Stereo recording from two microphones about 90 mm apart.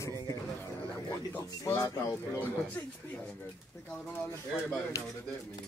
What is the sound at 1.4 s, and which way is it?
Speech, 35° left (ahead or behind).